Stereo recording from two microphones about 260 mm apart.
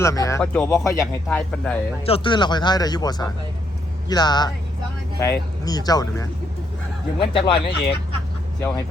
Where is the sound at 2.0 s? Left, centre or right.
Left.